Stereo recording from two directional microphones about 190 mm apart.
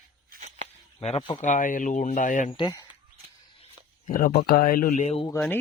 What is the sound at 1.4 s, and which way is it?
Speech, 45° left (ahead or behind).